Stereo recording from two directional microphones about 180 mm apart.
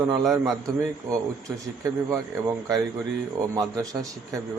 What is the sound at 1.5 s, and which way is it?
Speech, 15° right (ahead or behind).